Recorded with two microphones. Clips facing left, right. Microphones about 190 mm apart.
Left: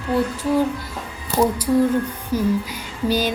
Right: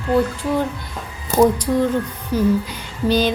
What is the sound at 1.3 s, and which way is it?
Speech, 45° right (ahead or behind).